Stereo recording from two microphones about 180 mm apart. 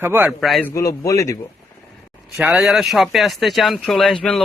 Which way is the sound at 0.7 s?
15° left (ahead or behind).